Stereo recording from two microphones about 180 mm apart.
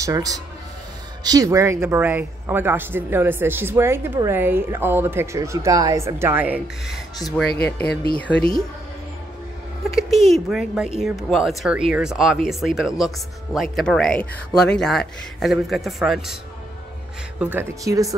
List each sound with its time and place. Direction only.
0.0 s speech: 20° right (ahead or behind)
7.4 s speech: 60° left (ahead or behind)
8.2 s speech: 5° left (ahead or behind)
9.9 s speech: centre (ahead or behind)
17.4 s speech: 10° right (ahead or behind)